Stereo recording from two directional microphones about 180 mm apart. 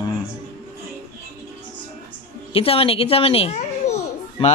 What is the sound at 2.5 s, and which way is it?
A child's voice, 30° left (ahead or behind).